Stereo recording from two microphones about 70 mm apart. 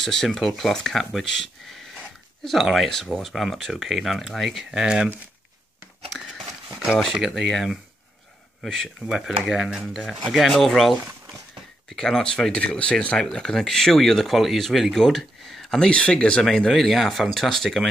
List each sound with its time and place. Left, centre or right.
0.0 s speech: centre
4.6 s speech: centre
7.1 s speech: centre
9.0 s speech: centre